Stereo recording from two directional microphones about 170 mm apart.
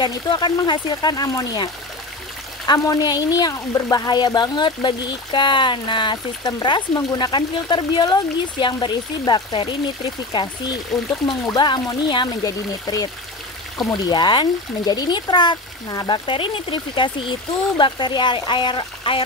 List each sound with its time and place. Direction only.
0.0 s speech: 25° left (ahead or behind)
10.9 s speech: centre (ahead or behind)
11.2 s speech: 25° left (ahead or behind)